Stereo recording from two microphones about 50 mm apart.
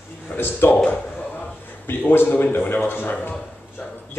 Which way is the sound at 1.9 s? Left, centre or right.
Left.